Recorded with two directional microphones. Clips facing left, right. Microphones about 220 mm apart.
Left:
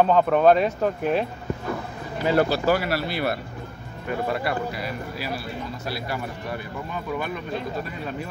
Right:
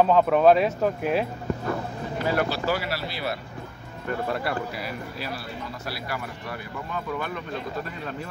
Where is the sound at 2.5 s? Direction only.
50° left (ahead or behind).